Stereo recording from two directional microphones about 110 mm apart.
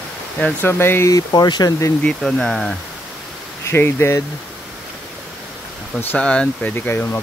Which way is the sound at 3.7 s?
20° left (ahead or behind).